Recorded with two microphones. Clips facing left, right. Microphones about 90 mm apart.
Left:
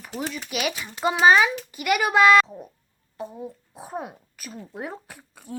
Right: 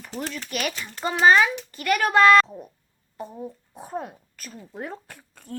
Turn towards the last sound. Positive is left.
turn(degrees=5)  # may be behind; listen again after turning